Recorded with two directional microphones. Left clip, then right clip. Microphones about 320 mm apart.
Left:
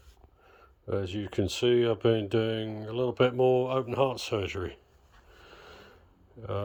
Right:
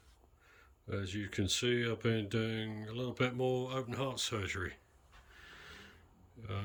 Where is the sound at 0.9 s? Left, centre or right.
Centre.